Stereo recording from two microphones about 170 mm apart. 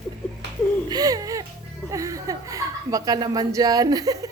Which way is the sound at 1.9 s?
20° right (ahead or behind).